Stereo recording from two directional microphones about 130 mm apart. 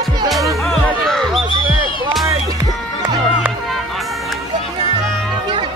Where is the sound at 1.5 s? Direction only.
40° left (ahead or behind).